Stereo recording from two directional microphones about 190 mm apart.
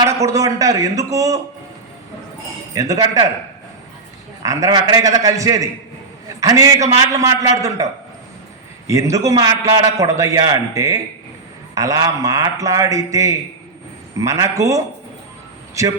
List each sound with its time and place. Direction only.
0.0 s a man's voice: 15° right (ahead or behind)
2.7 s a man's voice: 20° right (ahead or behind)
4.4 s a man's voice: 20° right (ahead or behind)
8.9 s a man's voice: 15° right (ahead or behind)